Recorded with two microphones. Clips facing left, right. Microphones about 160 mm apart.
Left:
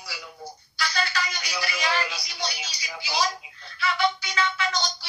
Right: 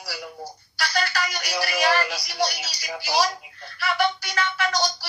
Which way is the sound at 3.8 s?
55° right (ahead or behind).